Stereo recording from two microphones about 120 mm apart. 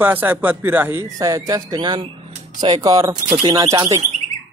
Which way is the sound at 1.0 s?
30° right (ahead or behind).